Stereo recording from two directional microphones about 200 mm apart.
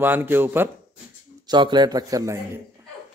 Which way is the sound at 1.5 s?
20° right (ahead or behind).